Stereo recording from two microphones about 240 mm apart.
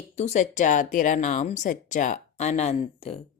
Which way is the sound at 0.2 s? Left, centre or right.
Left.